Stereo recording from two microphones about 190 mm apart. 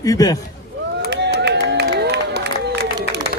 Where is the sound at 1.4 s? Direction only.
60° right (ahead or behind).